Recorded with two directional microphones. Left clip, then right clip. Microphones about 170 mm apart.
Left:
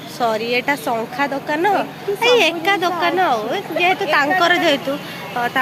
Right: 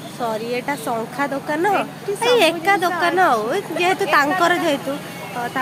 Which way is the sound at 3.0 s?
30° right (ahead or behind).